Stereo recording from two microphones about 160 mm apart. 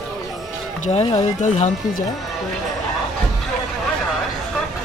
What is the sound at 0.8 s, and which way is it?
Speech, 40° left (ahead or behind).